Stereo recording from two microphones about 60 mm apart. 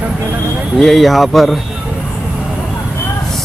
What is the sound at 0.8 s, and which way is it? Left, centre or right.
Speech, centre.